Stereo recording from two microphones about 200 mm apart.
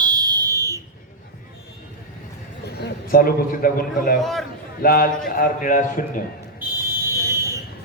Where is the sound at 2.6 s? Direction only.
55° left (ahead or behind).